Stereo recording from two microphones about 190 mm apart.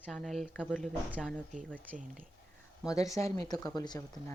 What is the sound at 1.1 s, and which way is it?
Speech, 5° right (ahead or behind).